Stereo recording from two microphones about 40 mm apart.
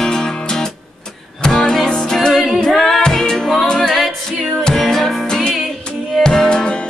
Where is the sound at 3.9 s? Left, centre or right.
Centre.